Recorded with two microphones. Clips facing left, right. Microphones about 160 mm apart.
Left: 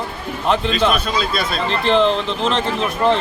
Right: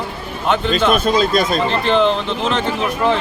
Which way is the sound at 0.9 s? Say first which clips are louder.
Right 6 dB; 45° right (ahead or behind).